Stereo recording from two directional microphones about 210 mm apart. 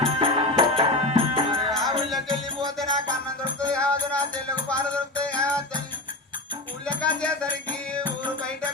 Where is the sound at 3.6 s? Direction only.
5° left (ahead or behind).